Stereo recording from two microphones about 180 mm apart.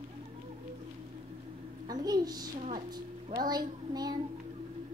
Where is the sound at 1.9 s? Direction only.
20° right (ahead or behind).